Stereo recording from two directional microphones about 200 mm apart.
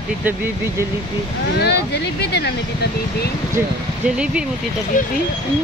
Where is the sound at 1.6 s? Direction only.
55° left (ahead or behind).